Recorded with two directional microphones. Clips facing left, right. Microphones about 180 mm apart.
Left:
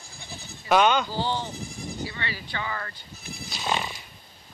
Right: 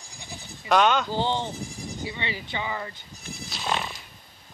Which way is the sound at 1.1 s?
20° right (ahead or behind).